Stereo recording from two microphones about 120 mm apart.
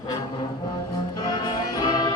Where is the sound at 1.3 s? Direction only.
35° left (ahead or behind).